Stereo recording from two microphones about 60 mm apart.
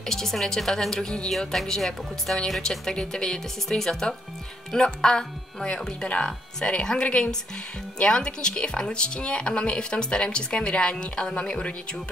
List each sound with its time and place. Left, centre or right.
0.0 s speech: centre